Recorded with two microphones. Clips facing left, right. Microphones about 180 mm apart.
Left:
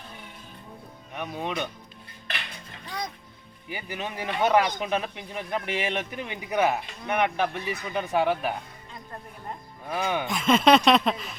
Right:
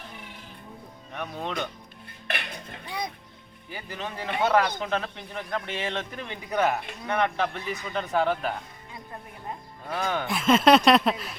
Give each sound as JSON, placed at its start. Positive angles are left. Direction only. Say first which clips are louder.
{"t": 1.1, "sound": "speech", "louder": "left 1 dB", "side_deg": 10}
{"t": 2.3, "sound": "dishes", "louder": "right 4 dB", "side_deg": -50}
{"t": 3.7, "sound": "speech", "louder": "left 2 dB", "side_deg": 15}
{"t": 9.9, "sound": "speech", "louder": "left 1 dB", "side_deg": 10}
{"t": 10.2, "sound": "speech", "louder": "right 1 dB", "side_deg": 0}